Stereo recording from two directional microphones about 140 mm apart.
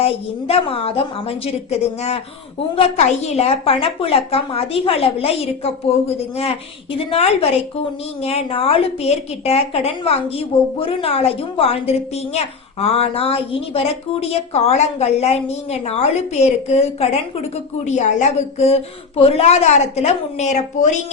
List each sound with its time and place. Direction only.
0.0 s a woman's voice: 45° left (ahead or behind)
17.8 s a woman's voice: 55° left (ahead or behind)